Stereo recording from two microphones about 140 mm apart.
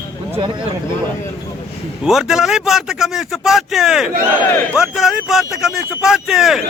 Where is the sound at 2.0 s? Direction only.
5° right (ahead or behind).